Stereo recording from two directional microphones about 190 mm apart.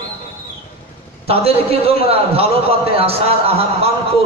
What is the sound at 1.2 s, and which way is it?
A man's voice, 30° right (ahead or behind).